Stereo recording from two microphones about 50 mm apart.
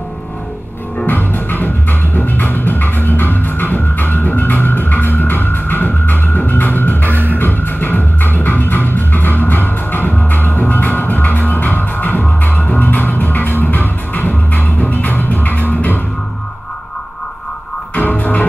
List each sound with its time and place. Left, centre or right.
1.0 s music: left
7.1 s music: right
7.3 s music: left
17.9 s music: left